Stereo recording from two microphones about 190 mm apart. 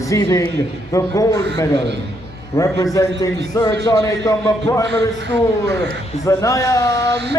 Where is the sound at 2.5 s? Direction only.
15° left (ahead or behind).